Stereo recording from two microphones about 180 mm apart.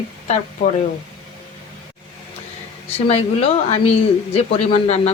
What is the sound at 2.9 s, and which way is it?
Speech, 35° left (ahead or behind).